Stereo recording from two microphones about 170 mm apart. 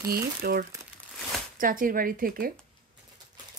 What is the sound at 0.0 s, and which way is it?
A woman's voice, 60° right (ahead or behind).